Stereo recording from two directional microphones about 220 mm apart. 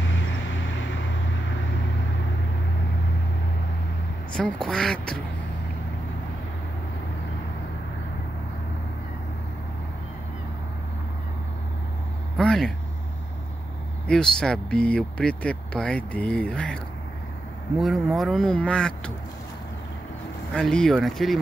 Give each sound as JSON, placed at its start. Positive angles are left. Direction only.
{"t": 0.1, "sound": "vehicle", "side_deg": 60}
{"t": 4.4, "sound": "speech", "side_deg": 5}
{"t": 12.4, "sound": "vehicle", "side_deg": 5}
{"t": 14.0, "sound": "speech", "side_deg": 5}
{"t": 20.5, "sound": "speech", "side_deg": 5}